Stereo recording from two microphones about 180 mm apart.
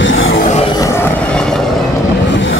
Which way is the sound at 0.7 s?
15° left (ahead or behind).